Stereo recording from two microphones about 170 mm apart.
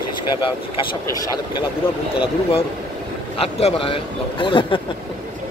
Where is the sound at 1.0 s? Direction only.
20° left (ahead or behind).